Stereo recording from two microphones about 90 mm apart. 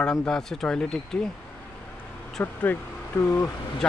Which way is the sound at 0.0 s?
10° left (ahead or behind).